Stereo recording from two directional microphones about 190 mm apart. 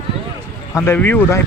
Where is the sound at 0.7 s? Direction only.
15° left (ahead or behind).